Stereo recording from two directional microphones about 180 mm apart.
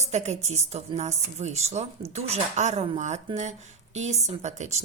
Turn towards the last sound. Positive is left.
turn(degrees=-40)  # may be behind; listen again after turning